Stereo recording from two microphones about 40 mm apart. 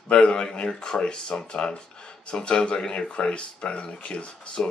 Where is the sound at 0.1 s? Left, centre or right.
Left.